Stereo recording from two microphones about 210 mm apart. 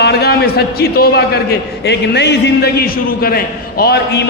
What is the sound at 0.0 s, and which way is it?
A man's voice, 50° left (ahead or behind).